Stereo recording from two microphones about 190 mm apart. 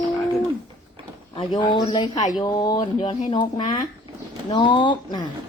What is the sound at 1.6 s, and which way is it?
A woman's voice, 25° left (ahead or behind).